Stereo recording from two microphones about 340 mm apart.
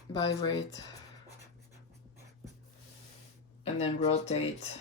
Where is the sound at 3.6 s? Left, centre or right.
Centre.